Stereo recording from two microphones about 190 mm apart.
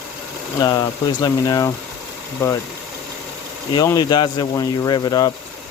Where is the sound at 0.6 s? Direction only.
20° left (ahead or behind).